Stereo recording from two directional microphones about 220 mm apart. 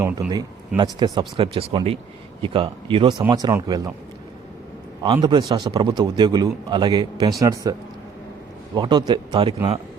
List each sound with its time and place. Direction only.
0.0 s a man's voice: 15° right (ahead or behind)
5.1 s a man's voice: 20° right (ahead or behind)